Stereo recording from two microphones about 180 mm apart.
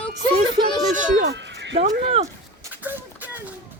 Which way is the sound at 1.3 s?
75° right (ahead or behind).